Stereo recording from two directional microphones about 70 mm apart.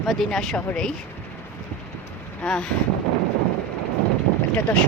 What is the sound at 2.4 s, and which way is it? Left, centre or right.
Speech, centre.